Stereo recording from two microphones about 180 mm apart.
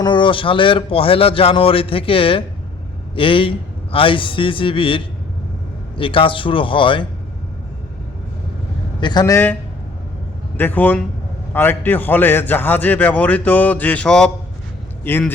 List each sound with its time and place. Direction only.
0.0 s a man's voice: 25° left (ahead or behind)
9.0 s a man's voice: 25° left (ahead or behind)
10.6 s a man's voice: 10° left (ahead or behind)